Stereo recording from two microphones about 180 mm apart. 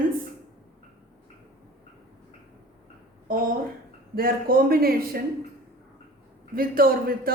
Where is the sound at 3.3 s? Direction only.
55° right (ahead or behind).